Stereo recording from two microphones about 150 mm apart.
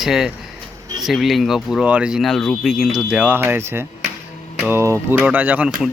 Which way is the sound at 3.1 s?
10° right (ahead or behind).